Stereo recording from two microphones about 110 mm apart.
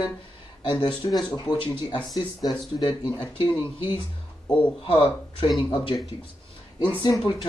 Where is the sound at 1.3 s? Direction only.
35° left (ahead or behind).